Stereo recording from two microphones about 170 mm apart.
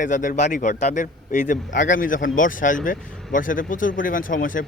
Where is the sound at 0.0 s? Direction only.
50° left (ahead or behind).